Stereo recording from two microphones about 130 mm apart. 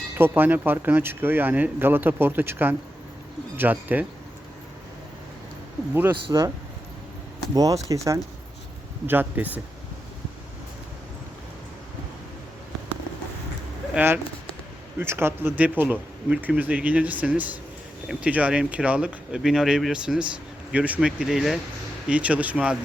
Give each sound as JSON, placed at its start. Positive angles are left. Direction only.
{"t": 0.2, "sound": "speech", "side_deg": -15}
{"t": 5.9, "sound": "speech", "side_deg": -15}
{"t": 7.5, "sound": "speech", "side_deg": -25}
{"t": 9.0, "sound": "speech", "side_deg": -15}
{"t": 13.9, "sound": "speech", "side_deg": -15}